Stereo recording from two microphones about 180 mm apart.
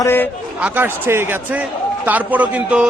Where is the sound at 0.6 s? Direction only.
10° right (ahead or behind).